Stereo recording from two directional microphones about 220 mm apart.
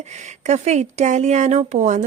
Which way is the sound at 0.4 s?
30° right (ahead or behind).